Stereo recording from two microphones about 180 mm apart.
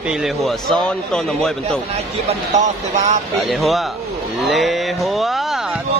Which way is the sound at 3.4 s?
Centre (ahead or behind).